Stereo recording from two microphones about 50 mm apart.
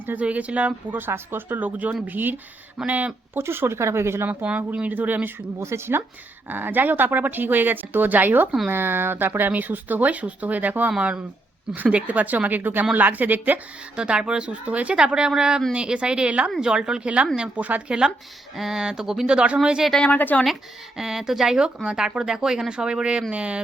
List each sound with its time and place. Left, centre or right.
0.2 s speech: right
3.3 s speech: right
3.8 s speech: right
4.4 s speech: right
5.5 s speech: right
6.5 s speech: right
13.9 s speech: centre
18.5 s speech: centre
19.3 s speech: right
20.1 s speech: left
21.0 s speech: centre; by 23.6 s right